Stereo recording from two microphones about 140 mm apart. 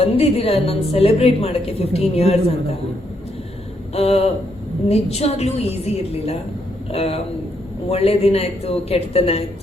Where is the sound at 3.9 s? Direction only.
45° left (ahead or behind).